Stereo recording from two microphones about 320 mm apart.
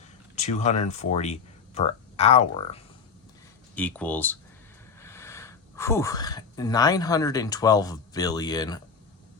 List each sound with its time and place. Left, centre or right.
0.3 s speech: left
3.8 s speech: centre